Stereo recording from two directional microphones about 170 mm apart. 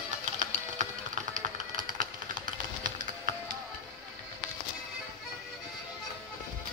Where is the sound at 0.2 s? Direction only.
45° right (ahead or behind).